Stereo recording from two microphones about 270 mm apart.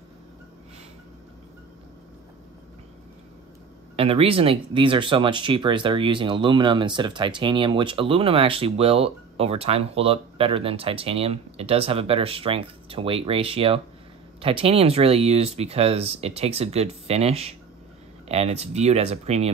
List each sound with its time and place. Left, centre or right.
3.9 s speech: right